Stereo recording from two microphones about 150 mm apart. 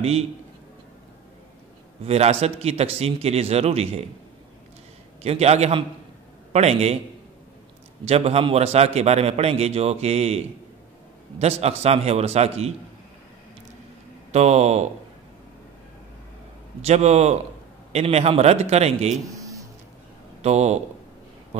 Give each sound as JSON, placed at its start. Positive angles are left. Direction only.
{"t": 2.0, "sound": "a man's voice", "side_deg": -45}
{"t": 5.2, "sound": "a man's voice", "side_deg": -45}
{"t": 8.0, "sound": "a man's voice", "side_deg": -45}
{"t": 14.3, "sound": "a man's voice", "side_deg": -45}
{"t": 16.8, "sound": "a man's voice", "side_deg": -45}
{"t": 19.3, "sound": "a sound", "side_deg": -20}
{"t": 20.4, "sound": "a man's voice", "side_deg": -50}